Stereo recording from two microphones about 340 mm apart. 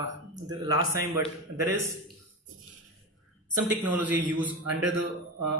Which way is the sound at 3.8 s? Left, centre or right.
Centre.